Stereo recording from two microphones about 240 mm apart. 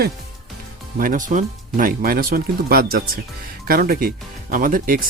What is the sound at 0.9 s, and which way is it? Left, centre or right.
Speech, right.